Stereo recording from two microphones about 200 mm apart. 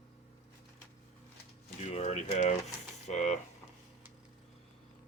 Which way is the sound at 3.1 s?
35° left (ahead or behind).